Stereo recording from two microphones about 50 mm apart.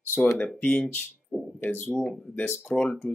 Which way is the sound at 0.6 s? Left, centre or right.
Left.